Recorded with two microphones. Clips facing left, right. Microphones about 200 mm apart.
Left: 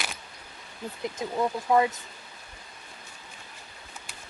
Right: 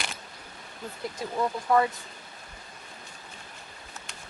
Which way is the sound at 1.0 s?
20° left (ahead or behind).